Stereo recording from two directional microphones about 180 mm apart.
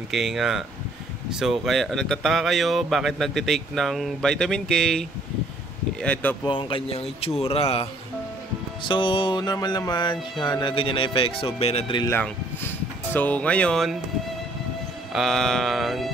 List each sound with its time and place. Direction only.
0.1 s speech: centre (ahead or behind)
6.4 s speech: 30° left (ahead or behind)
12.0 s speech: 15° left (ahead or behind)
15.1 s speech: centre (ahead or behind)